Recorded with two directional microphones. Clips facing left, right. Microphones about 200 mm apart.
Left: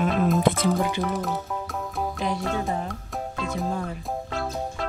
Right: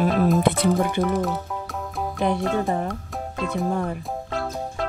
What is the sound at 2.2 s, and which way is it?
Music, 55° right (ahead or behind).